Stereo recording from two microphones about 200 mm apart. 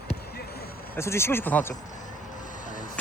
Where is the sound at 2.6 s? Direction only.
40° left (ahead or behind).